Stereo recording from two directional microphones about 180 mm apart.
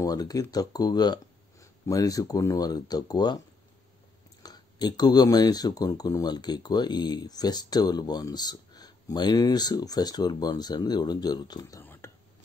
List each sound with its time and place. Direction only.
0.0 s speech: 20° left (ahead or behind)
11.8 s whispering: 10° left (ahead or behind)